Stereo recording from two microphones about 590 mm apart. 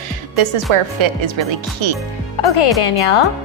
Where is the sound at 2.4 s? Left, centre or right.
Left.